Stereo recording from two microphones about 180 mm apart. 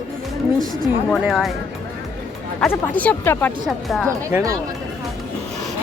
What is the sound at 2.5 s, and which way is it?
Speech, 10° left (ahead or behind).